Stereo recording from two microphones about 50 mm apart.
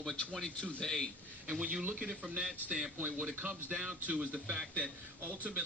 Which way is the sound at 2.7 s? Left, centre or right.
Right.